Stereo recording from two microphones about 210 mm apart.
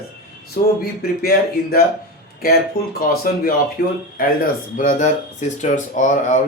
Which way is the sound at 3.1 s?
45° left (ahead or behind).